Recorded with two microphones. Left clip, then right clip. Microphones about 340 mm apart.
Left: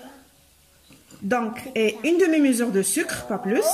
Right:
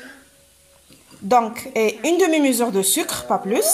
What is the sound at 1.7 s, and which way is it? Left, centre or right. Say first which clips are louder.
A woman's voice: right 2 dB; right.